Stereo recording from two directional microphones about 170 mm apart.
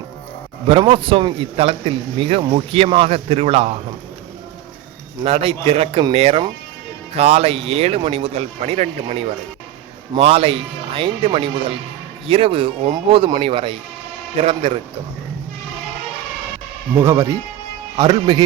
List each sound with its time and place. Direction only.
0.7 s speech: 30° right (ahead or behind)
5.2 s speech: 35° right (ahead or behind)
17.0 s speech: 15° right (ahead or behind)